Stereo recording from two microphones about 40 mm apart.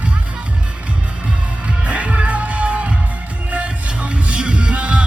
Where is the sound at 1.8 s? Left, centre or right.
Right.